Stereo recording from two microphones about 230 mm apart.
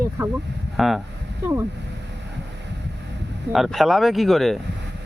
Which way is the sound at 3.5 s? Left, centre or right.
Centre.